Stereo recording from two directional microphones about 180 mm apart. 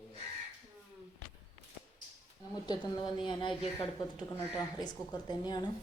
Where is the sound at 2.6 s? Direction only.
25° left (ahead or behind).